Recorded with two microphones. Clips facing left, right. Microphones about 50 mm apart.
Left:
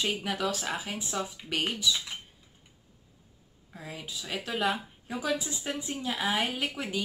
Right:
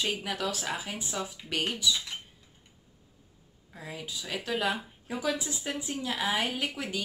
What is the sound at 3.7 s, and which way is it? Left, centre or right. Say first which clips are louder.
A woman's voice: right 1 dB; centre.